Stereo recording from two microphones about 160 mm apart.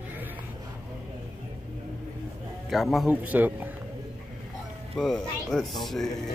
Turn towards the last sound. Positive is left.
turn(degrees=0)  # may be behind; listen again after turning